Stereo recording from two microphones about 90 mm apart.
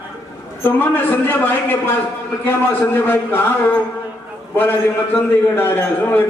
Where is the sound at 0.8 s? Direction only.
25° left (ahead or behind).